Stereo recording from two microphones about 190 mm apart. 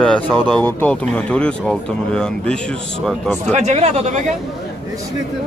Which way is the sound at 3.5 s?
35° right (ahead or behind).